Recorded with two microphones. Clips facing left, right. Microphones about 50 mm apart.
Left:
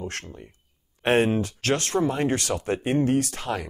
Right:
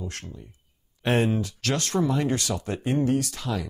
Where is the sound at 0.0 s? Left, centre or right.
Left.